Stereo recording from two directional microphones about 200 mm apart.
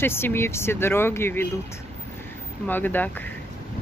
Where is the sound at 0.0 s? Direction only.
10° left (ahead or behind).